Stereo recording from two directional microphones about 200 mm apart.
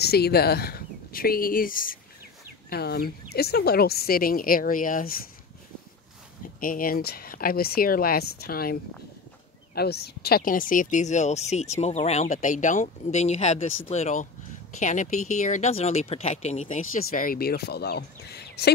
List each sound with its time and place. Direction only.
0.0 s speech: 50° left (ahead or behind)
6.6 s speech: 45° left (ahead or behind)
9.8 s speech: 55° left (ahead or behind)